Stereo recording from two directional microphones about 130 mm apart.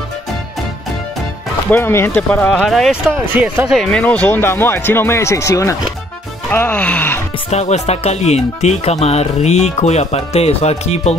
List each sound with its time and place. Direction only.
1.7 s speech: 20° left (ahead or behind)
2.5 s speech: centre (ahead or behind)
3.2 s speech: 10° right (ahead or behind)
3.7 s speech: 5° left (ahead or behind)
7.5 s speech: 60° left (ahead or behind)